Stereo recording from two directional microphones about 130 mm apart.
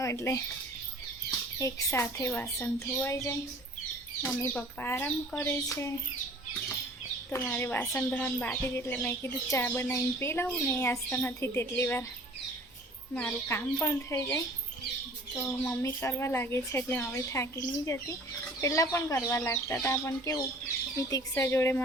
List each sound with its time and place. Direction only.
0.0 s speech: 20° left (ahead or behind)
1.5 s speech: 20° left (ahead or behind)
7.5 s speech: 15° left (ahead or behind)
13.1 s speech: 15° left (ahead or behind)
15.4 s speech: 20° left (ahead or behind)